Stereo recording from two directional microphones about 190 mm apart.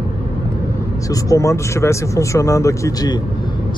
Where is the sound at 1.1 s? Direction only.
15° left (ahead or behind).